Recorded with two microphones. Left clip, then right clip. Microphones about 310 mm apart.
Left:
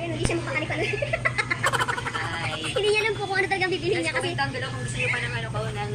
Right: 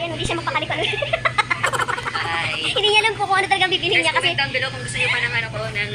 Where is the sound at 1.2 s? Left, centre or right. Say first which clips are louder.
Right 5 dB; centre.